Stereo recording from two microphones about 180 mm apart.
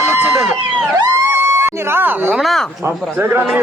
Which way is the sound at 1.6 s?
15° right (ahead or behind).